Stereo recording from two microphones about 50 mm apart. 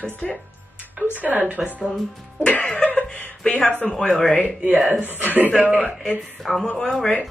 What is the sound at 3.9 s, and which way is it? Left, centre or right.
Speech, centre.